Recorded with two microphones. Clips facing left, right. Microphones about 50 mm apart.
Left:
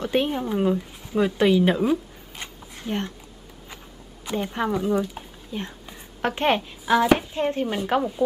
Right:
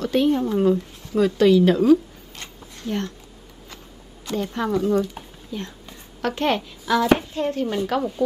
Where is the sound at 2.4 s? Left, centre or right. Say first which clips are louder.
Right 1 dB; centre.